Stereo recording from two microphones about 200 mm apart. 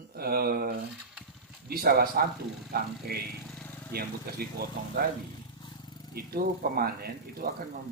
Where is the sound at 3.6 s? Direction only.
10° left (ahead or behind).